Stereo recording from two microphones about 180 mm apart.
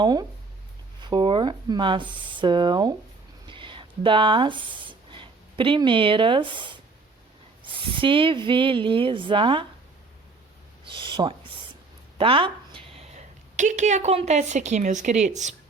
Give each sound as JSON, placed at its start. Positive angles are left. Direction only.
{"t": 0.0, "sound": "speech", "side_deg": -20}
{"t": 3.4, "sound": "a sound", "side_deg": -25}
{"t": 7.6, "sound": "speech", "side_deg": -30}
{"t": 10.8, "sound": "a woman's voice", "side_deg": -25}